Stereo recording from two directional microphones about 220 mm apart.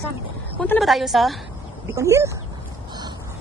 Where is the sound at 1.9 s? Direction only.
15° right (ahead or behind).